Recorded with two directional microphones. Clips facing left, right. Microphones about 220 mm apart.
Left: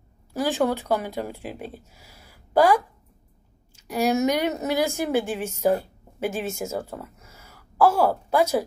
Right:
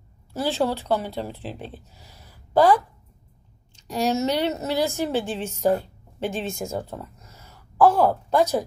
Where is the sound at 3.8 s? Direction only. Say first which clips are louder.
Left 1 dB; 10° left (ahead or behind).